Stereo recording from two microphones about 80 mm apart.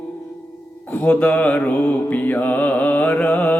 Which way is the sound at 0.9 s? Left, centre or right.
Centre.